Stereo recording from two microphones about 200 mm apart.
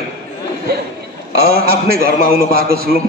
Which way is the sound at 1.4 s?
50° right (ahead or behind).